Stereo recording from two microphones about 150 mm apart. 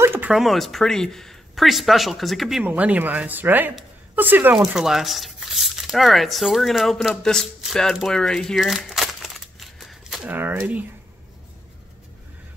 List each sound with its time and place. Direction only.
0.0 s a sound: 15° right (ahead or behind)
0.3 s speech: centre (ahead or behind)
10.3 s speech: 15° right (ahead or behind)